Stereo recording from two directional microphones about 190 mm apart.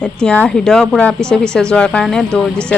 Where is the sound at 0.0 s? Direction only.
5° left (ahead or behind).